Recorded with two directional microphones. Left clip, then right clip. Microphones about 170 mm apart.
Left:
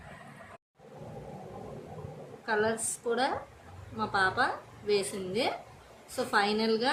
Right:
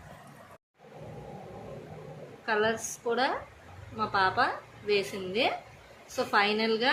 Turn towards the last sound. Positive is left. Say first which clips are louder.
# right 2 dB
turn(degrees=0)  # may be behind; listen again after turning